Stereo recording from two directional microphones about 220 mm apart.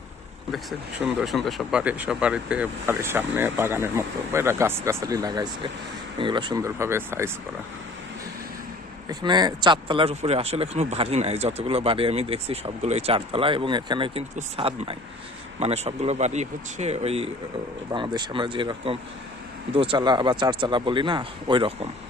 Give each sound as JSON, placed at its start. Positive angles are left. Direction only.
{"t": 0.5, "sound": "speech", "side_deg": 0}
{"t": 9.0, "sound": "speech", "side_deg": -20}